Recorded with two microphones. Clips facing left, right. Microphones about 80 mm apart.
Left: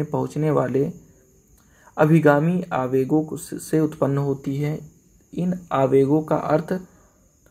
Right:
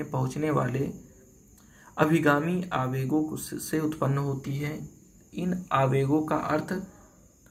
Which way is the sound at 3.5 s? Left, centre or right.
Centre.